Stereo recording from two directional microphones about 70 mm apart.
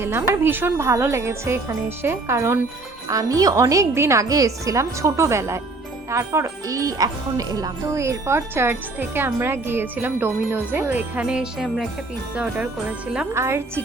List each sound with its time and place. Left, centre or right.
0.0 s speech: right
3.1 s speech: right
11.3 s jingle bell: centre
13.3 s speech: right